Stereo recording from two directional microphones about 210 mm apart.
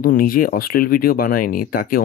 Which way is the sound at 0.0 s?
40° left (ahead or behind).